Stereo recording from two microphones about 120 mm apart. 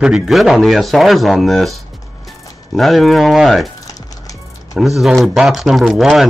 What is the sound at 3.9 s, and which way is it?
Music, 30° left (ahead or behind).